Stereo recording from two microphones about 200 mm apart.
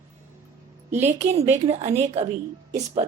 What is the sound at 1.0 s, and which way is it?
A woman's voice, 30° right (ahead or behind).